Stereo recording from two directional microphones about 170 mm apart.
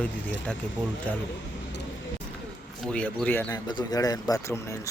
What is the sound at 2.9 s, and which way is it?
Speech, 10° left (ahead or behind).